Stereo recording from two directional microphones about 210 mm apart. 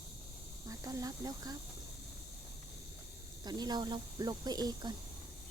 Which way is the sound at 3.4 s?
20° right (ahead or behind).